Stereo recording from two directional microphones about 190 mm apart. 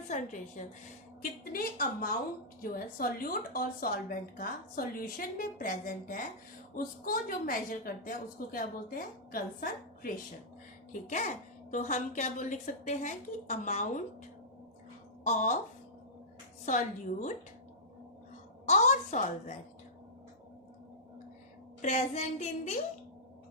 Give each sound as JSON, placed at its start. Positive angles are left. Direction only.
{"t": 0.1, "sound": "a child's voice", "side_deg": 40}
{"t": 15.2, "sound": "a woman's voice", "side_deg": 40}
{"t": 16.6, "sound": "a child's voice", "side_deg": 40}
{"t": 18.6, "sound": "a woman's voice", "side_deg": 35}
{"t": 21.8, "sound": "a child's voice", "side_deg": 35}